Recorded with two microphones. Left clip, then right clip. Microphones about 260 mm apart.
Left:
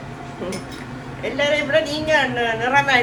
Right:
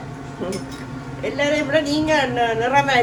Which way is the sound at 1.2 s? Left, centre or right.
Centre.